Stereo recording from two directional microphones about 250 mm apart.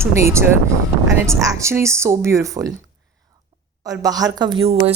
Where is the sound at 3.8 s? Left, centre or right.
Centre.